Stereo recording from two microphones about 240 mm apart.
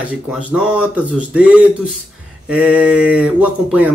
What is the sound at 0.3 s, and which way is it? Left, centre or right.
Speech, centre.